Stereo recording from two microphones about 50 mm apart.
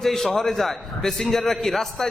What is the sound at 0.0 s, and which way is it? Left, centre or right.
A man's voice, centre.